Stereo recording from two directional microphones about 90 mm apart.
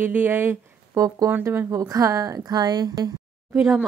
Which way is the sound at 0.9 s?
40° right (ahead or behind).